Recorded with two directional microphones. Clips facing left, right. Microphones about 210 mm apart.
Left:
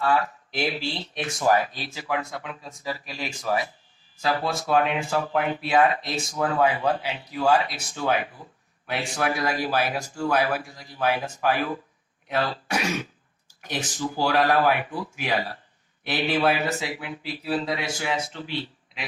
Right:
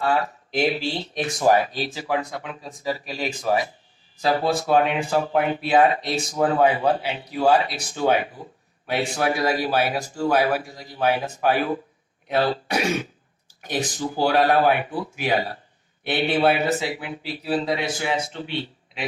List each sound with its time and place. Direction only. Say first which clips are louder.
0.0 s speech: right 1 dB; 30° right (ahead or behind)